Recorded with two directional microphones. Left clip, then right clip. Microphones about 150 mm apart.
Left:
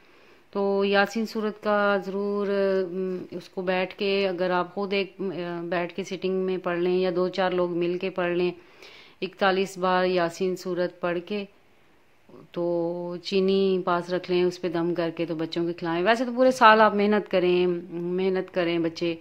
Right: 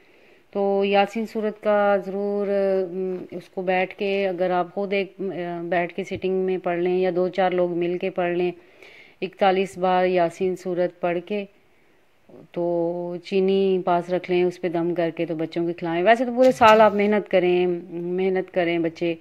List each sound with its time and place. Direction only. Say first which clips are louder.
0.5 s speech: right 3 dB; 10° right (ahead or behind)
12.5 s mantra: right 3 dB; 15° right (ahead or behind)
18.1 s speech: right 3 dB; 15° right (ahead or behind)